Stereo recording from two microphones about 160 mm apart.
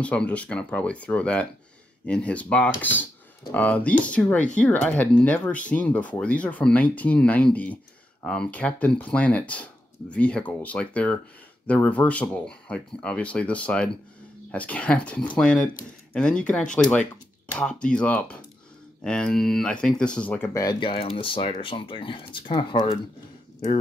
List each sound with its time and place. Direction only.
0.0 s speech: 10° left (ahead or behind)
20.9 s speech: 35° left (ahead or behind)